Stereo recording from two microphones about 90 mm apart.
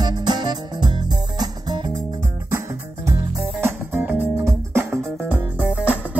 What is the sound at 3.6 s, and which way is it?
Music, 25° right (ahead or behind).